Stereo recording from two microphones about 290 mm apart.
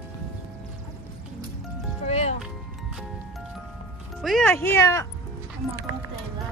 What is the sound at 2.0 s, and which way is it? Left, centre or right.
Music, left.